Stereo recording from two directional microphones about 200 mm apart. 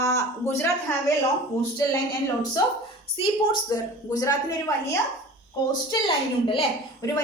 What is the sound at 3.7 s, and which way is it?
Speech, 20° left (ahead or behind).